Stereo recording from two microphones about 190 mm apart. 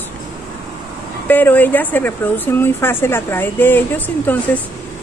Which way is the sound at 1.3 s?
10° left (ahead or behind).